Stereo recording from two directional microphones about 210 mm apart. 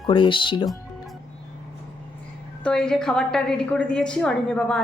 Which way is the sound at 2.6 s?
5° left (ahead or behind).